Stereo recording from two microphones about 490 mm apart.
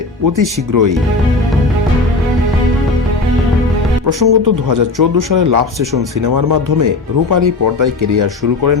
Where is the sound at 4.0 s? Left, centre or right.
Right.